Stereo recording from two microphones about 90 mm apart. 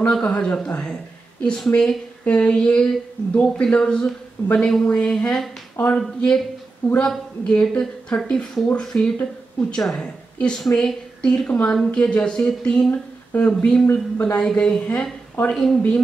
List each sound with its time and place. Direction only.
0.0 s speech: 10° left (ahead or behind)
13.8 s speech: 25° left (ahead or behind)
14.3 s speech: 10° left (ahead or behind)